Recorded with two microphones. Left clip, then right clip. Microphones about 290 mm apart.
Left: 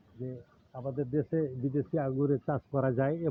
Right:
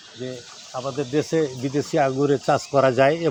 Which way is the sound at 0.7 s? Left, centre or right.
Right.